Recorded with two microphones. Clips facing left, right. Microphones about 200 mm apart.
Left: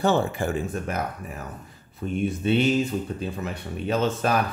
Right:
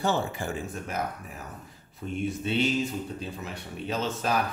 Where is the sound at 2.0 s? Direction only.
55° left (ahead or behind).